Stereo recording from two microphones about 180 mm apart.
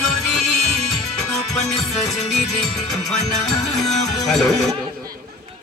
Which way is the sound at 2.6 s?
5° left (ahead or behind).